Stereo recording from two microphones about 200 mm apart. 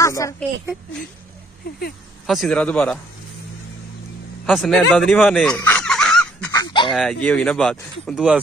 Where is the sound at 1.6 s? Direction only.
45° left (ahead or behind).